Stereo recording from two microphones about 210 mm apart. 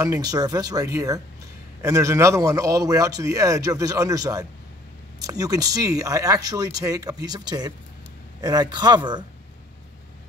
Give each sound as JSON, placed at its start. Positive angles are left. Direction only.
{"t": 0.0, "sound": "a man's voice", "side_deg": -15}